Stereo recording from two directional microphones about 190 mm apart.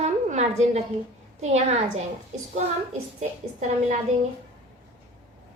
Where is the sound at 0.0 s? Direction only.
35° right (ahead or behind).